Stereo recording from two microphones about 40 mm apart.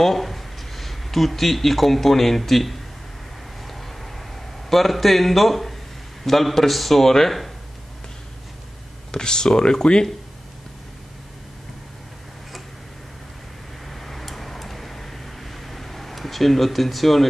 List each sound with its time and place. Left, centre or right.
0.0 s speech: centre
3.6 s vehicle: centre
4.6 s a man's voice: centre
9.1 s speech: centre
13.8 s a sound: centre